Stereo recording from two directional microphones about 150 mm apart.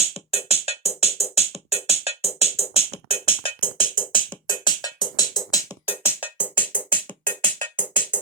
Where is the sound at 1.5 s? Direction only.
40° left (ahead or behind).